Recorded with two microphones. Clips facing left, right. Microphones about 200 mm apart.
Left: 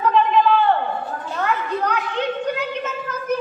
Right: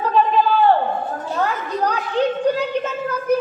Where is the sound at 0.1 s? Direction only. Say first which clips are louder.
Even; 35° right (ahead or behind).